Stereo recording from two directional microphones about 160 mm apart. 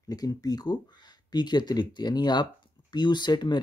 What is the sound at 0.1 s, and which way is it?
Speech, 25° left (ahead or behind).